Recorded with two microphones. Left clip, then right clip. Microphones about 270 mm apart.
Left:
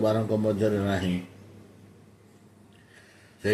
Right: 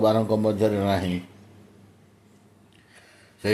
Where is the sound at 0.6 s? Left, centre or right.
Right.